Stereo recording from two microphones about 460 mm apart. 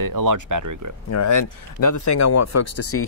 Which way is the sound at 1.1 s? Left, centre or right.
Left.